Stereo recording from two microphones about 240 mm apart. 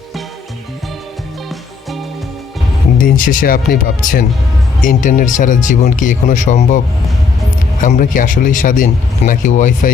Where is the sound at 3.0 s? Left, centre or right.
Left.